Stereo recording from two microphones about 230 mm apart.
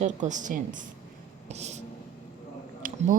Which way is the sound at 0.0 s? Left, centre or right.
Right.